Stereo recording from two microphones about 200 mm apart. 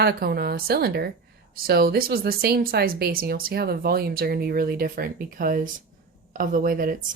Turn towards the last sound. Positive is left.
turn(degrees=-45)  # may be behind; listen again after turning